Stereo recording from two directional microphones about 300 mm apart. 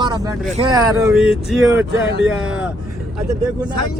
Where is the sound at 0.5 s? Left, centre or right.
Centre.